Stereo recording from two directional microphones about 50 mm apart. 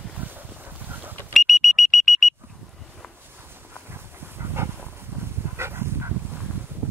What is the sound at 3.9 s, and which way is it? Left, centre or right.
Dog, right.